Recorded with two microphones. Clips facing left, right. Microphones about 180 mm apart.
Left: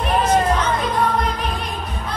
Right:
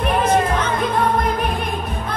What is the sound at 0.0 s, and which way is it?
Music, 55° right (ahead or behind).